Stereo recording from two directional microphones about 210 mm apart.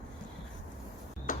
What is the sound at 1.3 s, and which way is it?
Tick-tock, 40° left (ahead or behind).